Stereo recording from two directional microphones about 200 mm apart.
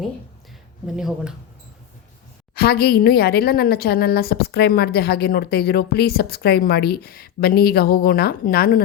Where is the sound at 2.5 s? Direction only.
55° left (ahead or behind).